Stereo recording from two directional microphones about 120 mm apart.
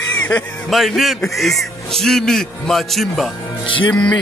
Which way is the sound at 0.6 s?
Centre (ahead or behind).